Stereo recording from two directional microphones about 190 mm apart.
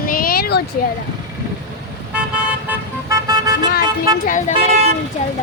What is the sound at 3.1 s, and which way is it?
Vehicle, 20° right (ahead or behind).